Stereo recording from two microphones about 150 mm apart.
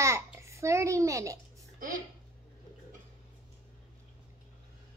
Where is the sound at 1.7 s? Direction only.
60° right (ahead or behind).